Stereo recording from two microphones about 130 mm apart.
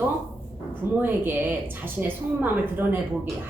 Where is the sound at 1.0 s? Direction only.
15° right (ahead or behind).